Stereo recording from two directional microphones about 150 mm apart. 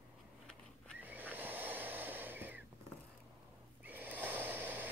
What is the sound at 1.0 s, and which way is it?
Snoring, 10° right (ahead or behind).